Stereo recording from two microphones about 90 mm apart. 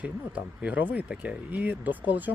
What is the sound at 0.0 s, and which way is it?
Speech, 15° right (ahead or behind).